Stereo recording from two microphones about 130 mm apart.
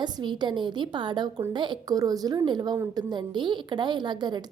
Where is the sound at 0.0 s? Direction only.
35° right (ahead or behind).